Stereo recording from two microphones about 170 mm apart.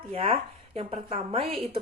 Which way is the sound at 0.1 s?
35° right (ahead or behind).